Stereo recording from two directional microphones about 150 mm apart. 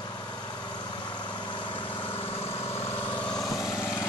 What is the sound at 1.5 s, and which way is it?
Vehicle, 35° left (ahead or behind).